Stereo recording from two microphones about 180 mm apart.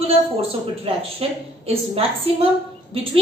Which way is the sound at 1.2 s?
35° right (ahead or behind).